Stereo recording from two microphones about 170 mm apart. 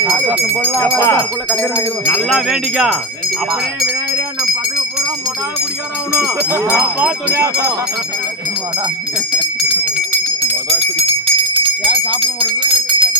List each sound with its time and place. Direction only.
0.1 s a sound: 5° right (ahead or behind)
0.7 s speech: 10° left (ahead or behind)
1.5 s speech: centre (ahead or behind)
6.5 s speech: 15° right (ahead or behind)
10.4 s a sound: 35° right (ahead or behind)
12.2 s bell: 30° right (ahead or behind)